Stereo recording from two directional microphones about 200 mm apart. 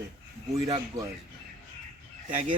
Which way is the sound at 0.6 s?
25° right (ahead or behind).